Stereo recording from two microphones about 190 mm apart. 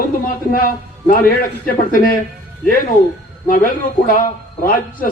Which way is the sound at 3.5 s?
45° left (ahead or behind).